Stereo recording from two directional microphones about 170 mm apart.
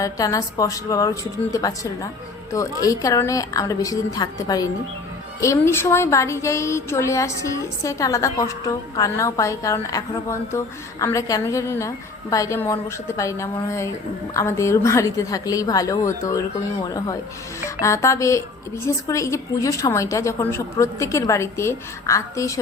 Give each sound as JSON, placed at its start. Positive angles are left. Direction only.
{"t": 0.0, "sound": "a woman's voice", "side_deg": 20}
{"t": 17.8, "sound": "a woman's voice", "side_deg": 15}